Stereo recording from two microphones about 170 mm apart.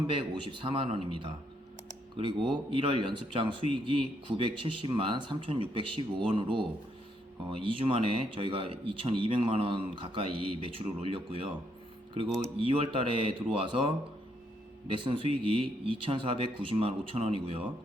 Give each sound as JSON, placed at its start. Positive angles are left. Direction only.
{"t": 0.1, "sound": "a man's voice", "side_deg": -30}
{"t": 12.5, "sound": "speech", "side_deg": -30}